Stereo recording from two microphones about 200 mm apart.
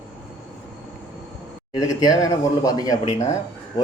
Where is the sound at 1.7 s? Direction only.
20° left (ahead or behind).